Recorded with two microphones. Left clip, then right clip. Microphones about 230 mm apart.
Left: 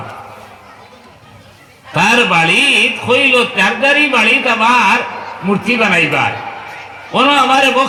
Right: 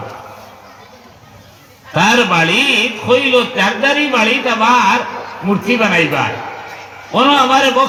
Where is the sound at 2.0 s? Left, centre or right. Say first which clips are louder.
Left 1 dB; left.